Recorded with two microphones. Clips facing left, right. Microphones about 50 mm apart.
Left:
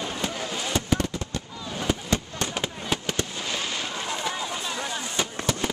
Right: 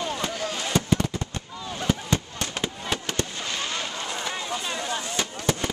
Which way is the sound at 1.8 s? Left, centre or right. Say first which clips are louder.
Right 1 dB; centre.